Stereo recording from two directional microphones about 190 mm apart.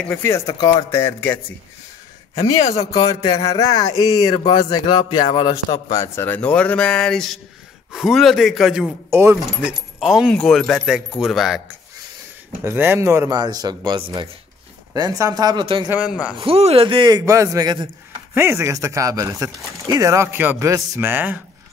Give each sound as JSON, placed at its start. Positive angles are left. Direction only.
{"t": 0.0, "sound": "a man's voice", "side_deg": 10}
{"t": 0.6, "sound": "speech", "side_deg": 20}
{"t": 1.0, "sound": "a man's voice", "side_deg": 10}
{"t": 2.6, "sound": "speech", "side_deg": 35}
{"t": 3.5, "sound": "a man's voice", "side_deg": 20}
{"t": 9.1, "sound": "speech", "side_deg": -15}
{"t": 12.6, "sound": "speech", "side_deg": -10}
{"t": 15.9, "sound": "speech", "side_deg": -5}
{"t": 16.3, "sound": "speech", "side_deg": -30}